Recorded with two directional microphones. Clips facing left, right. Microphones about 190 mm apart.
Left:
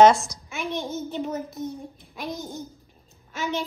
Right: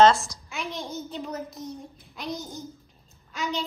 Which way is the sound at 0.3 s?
20° left (ahead or behind).